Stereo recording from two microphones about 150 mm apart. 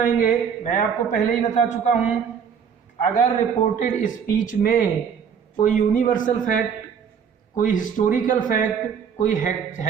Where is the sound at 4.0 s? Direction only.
60° left (ahead or behind).